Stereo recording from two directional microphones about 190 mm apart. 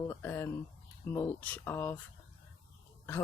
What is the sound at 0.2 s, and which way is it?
Speech, 10° left (ahead or behind).